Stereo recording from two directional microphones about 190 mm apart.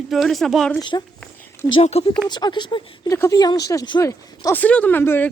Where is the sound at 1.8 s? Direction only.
35° left (ahead or behind).